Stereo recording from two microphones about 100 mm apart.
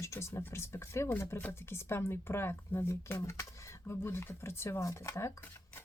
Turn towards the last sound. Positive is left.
turn(degrees=25)  # may be behind; listen again after turning